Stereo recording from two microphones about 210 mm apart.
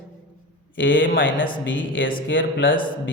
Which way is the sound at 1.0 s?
65° left (ahead or behind).